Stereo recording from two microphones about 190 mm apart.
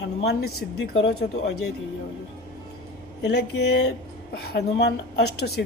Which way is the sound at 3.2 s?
65° left (ahead or behind).